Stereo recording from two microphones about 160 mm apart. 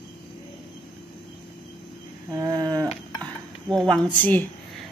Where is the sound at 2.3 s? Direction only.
25° right (ahead or behind).